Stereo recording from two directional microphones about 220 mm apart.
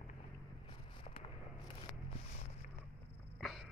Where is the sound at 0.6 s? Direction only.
25° left (ahead or behind).